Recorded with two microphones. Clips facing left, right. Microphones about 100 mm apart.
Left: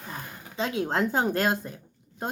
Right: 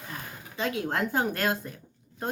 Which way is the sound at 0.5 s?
25° left (ahead or behind).